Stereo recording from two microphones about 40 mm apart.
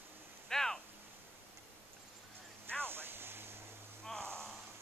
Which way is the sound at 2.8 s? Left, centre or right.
Right.